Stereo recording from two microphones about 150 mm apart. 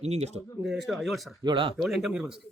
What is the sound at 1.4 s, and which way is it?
Speech, 30° right (ahead or behind).